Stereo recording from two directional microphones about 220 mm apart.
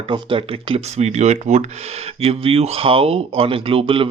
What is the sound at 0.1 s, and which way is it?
Speech, 25° right (ahead or behind).